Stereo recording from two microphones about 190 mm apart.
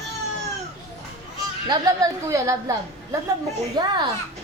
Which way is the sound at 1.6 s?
20° right (ahead or behind).